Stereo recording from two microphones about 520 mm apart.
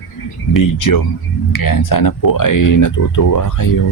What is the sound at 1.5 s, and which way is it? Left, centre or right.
Speech, left.